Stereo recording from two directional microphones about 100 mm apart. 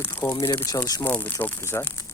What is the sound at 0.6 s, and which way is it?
Speech, 35° left (ahead or behind).